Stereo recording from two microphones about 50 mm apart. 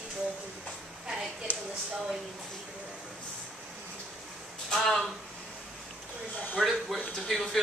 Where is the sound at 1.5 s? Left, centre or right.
Right.